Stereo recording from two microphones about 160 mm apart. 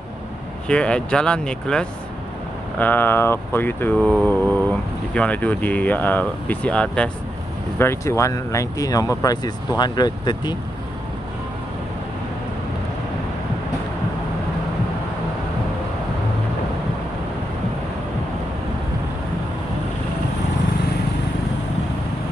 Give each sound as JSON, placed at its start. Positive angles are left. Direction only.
{"t": 0.7, "sound": "speech", "side_deg": 5}
{"t": 2.8, "sound": "a sound", "side_deg": 10}
{"t": 7.8, "sound": "speech", "side_deg": 15}